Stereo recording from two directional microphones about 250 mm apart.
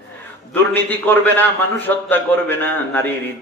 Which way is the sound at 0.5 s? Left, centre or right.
Centre.